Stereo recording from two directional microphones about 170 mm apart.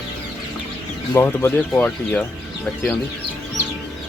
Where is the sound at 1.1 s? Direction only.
15° left (ahead or behind).